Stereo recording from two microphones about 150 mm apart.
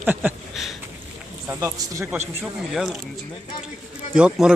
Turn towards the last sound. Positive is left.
turn(degrees=-5)  # may be behind; listen again after turning